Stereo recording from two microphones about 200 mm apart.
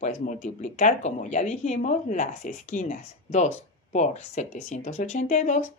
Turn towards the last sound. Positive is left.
turn(degrees=35)  # may be behind; listen again after turning